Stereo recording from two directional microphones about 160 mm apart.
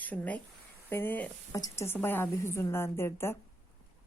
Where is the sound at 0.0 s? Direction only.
10° left (ahead or behind).